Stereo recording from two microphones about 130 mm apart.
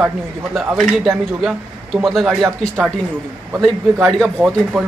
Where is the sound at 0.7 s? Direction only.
5° left (ahead or behind).